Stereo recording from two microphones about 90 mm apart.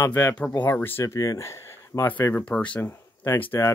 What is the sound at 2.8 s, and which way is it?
Speech, 25° left (ahead or behind).